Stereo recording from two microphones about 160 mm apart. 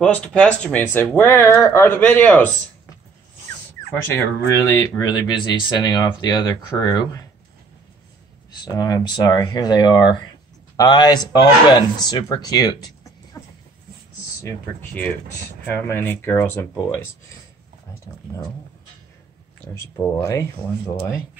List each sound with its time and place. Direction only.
0.0 s speech: 5° left (ahead or behind)
3.9 s speech: 15° left (ahead or behind)
8.6 s speech: 25° left (ahead or behind)
14.4 s speech: 10° left (ahead or behind)
19.6 s speech: 15° left (ahead or behind)